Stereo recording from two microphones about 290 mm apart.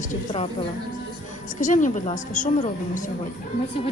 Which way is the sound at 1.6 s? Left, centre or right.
Left.